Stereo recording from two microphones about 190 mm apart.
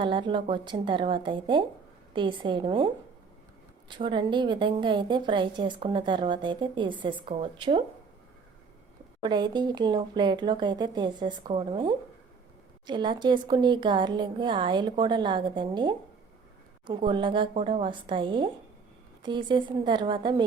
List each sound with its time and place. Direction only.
0.0 s a woman's voice: 25° right (ahead or behind)
9.2 s a woman's voice: 25° right (ahead or behind)